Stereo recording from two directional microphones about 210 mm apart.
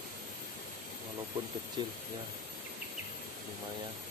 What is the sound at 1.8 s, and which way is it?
Speech, 20° right (ahead or behind).